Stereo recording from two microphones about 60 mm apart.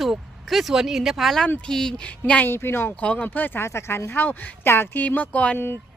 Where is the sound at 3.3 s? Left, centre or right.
Left.